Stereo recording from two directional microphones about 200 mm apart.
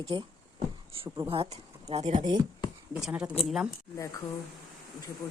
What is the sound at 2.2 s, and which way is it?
Speech, 20° right (ahead or behind).